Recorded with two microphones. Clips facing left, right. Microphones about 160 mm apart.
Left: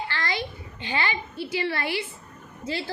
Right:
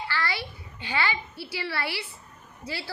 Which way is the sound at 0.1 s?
20° left (ahead or behind).